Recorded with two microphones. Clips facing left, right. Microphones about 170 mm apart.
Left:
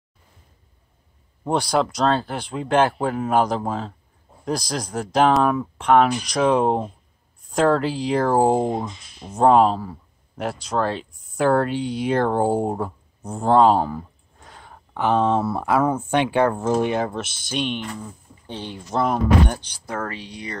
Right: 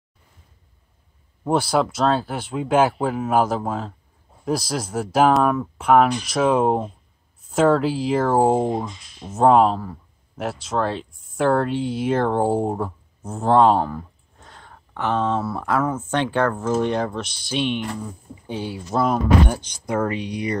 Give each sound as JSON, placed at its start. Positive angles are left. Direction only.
{"t": 1.4, "sound": "speech", "side_deg": -5}
{"t": 16.9, "sound": "speech", "side_deg": 5}